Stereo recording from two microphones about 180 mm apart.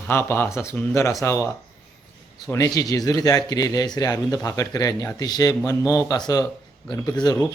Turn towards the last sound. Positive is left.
turn(degrees=20)  # may be behind; listen again after turning